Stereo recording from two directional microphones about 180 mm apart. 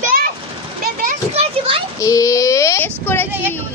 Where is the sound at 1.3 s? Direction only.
35° right (ahead or behind).